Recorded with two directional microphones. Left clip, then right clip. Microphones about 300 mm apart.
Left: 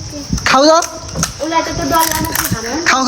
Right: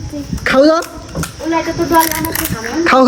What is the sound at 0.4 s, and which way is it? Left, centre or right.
Speech, centre.